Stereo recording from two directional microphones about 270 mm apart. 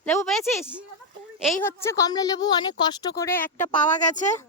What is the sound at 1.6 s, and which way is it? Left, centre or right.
Speech, centre.